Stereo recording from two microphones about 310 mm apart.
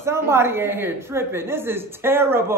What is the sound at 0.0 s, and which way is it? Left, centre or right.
A woman's voice, centre.